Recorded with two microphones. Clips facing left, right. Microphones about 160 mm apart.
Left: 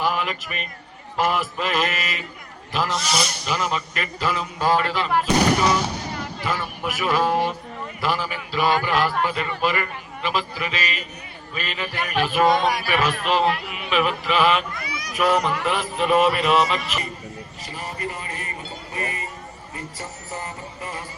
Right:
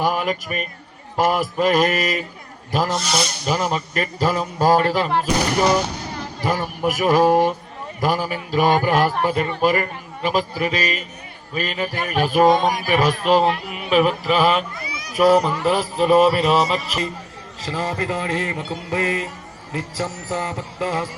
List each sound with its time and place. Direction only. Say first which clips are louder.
0.0 s speech: right 3 dB; 40° right (ahead or behind)
3.0 s speech: right 2 dB; centre (ahead or behind)
3.4 s a man's voice: right 4 dB; 40° right (ahead or behind)
17.6 s a man's voice: right 8 dB; 90° right